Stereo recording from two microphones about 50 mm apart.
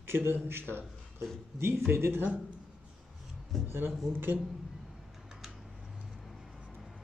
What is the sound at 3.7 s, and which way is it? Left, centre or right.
Speech, right.